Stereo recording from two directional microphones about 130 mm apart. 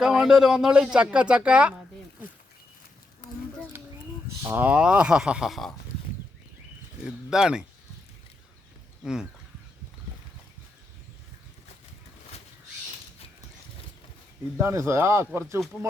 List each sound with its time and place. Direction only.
0.0 s speech: 5° right (ahead or behind)
3.7 s a sound: 15° right (ahead or behind)
4.4 s speech: 15° right (ahead or behind)
7.0 s speech: 5° right (ahead or behind)
14.6 s speech: 20° right (ahead or behind)